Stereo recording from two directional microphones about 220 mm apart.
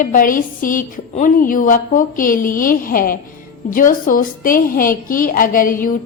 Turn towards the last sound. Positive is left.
turn(degrees=40)  # may be behind; listen again after turning